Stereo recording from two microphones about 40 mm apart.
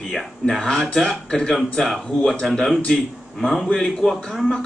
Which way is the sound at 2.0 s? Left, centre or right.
Centre.